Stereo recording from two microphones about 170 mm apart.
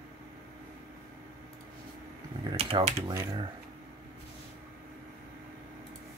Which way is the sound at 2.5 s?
35° right (ahead or behind).